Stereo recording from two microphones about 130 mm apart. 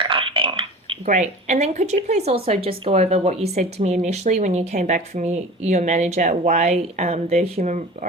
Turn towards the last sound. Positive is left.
turn(degrees=-65)  # may be behind; listen again after turning